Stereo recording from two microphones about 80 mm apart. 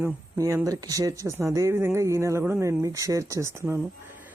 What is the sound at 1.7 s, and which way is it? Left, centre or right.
Speech, right.